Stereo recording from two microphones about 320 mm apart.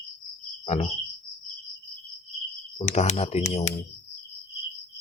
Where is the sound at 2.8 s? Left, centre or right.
Left.